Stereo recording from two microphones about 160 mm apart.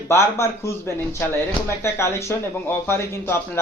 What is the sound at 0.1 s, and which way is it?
A man's voice, 15° left (ahead or behind).